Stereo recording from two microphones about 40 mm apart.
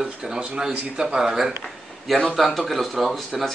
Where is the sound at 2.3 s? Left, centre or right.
Centre.